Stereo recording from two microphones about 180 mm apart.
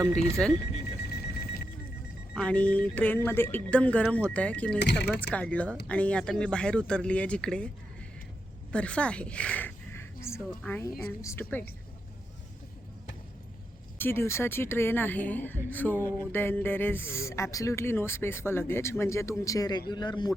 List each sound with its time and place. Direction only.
0.1 s speech: 5° left (ahead or behind)
1.1 s a sound: 60° left (ahead or behind)
2.3 s speech: 5° left (ahead or behind)
4.8 s speech: 70° left (ahead or behind)
5.2 s speech: 5° left (ahead or behind)
8.7 s speech: 5° left (ahead or behind)
14.0 s speech: 15° left (ahead or behind)